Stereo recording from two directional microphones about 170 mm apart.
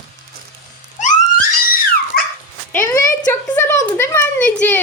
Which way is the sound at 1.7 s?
60° left (ahead or behind).